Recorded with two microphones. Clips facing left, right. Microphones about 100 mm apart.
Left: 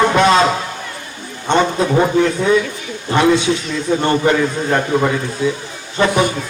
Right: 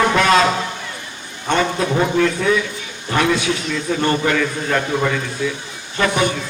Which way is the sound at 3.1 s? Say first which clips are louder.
Left 4 dB; 25° left (ahead or behind).